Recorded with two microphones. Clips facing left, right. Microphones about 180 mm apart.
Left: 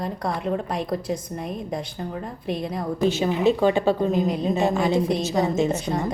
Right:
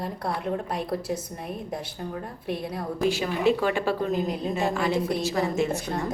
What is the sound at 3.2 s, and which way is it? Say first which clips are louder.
A woman's voice: left 5 dB; 20° left (ahead or behind).